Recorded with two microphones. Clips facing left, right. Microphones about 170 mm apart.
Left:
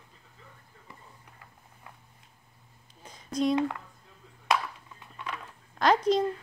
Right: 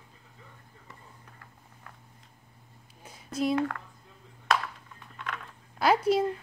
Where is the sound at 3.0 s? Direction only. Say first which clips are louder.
Left 2 dB; 10° right (ahead or behind).